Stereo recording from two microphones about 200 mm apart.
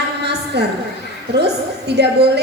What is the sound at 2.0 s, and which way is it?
Speech, 55° right (ahead or behind).